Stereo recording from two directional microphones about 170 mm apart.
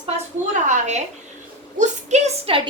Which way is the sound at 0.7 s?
45° right (ahead or behind).